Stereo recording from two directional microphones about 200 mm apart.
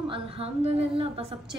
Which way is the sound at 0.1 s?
30° right (ahead or behind).